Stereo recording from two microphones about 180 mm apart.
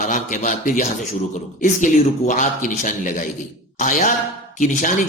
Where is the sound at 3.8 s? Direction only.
45° left (ahead or behind).